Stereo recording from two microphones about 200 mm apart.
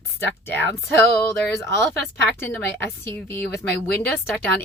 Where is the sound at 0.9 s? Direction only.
10° left (ahead or behind).